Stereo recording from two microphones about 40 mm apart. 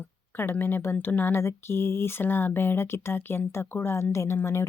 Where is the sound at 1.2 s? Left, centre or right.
Left.